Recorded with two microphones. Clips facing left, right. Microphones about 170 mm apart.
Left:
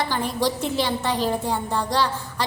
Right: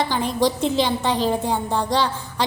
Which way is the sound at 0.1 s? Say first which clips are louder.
Right 3 dB; 20° right (ahead or behind).